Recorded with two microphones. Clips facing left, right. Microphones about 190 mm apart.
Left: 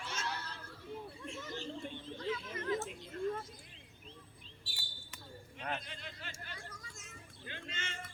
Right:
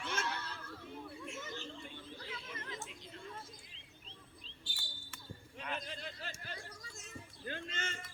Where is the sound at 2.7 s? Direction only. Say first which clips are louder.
Left 10 dB; 55° left (ahead or behind).